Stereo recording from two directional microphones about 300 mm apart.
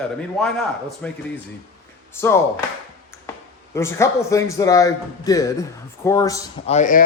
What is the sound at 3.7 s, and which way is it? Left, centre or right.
A man's voice, centre.